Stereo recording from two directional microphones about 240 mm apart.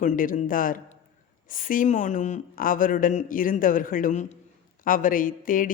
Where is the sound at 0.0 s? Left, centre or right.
Left.